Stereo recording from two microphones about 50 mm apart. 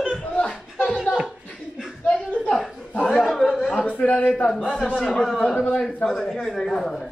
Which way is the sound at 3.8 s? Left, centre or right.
Left.